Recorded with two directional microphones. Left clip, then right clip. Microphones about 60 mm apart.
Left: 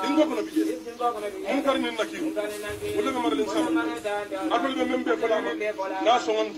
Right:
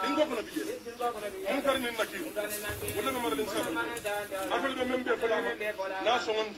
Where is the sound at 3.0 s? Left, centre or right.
Left.